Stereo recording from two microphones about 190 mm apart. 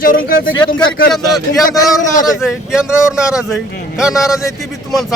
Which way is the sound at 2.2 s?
5° right (ahead or behind).